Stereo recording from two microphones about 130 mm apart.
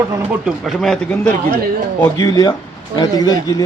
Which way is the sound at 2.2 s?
25° left (ahead or behind).